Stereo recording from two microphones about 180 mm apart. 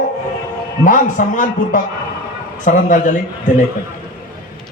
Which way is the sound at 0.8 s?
45° left (ahead or behind).